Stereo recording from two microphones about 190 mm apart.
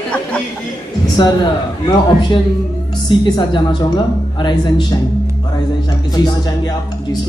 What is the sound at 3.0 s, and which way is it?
Speech, 25° left (ahead or behind).